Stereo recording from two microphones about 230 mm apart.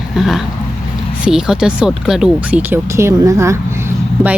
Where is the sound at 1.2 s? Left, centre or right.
Centre.